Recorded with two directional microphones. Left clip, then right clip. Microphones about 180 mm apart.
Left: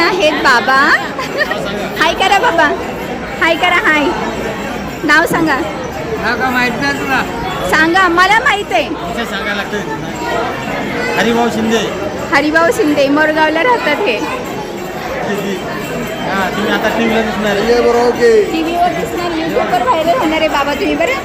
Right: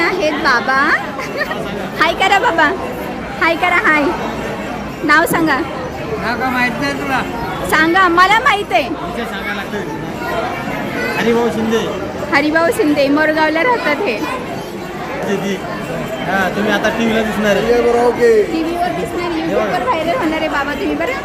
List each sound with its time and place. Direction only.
0.0 s chatter: centre (ahead or behind)
2.0 s a woman's voice: 5° right (ahead or behind)
5.0 s a woman's voice: 5° right (ahead or behind)
11.2 s speech: 30° left (ahead or behind)
12.3 s a woman's voice: 10° right (ahead or behind)
16.6 s speech: 60° right (ahead or behind)
17.7 s speech: centre (ahead or behind)
19.7 s speech: centre (ahead or behind)